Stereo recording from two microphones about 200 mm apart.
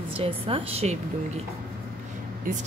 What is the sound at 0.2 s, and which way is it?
Speech, 30° right (ahead or behind).